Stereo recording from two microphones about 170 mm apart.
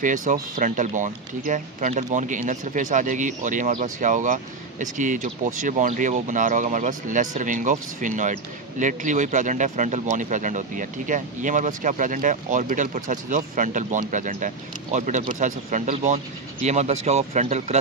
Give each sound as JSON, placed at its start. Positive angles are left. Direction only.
{"t": 0.0, "sound": "speech", "side_deg": -50}